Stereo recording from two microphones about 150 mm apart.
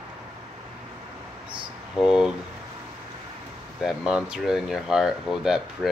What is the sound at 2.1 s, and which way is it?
Speech, 5° right (ahead or behind).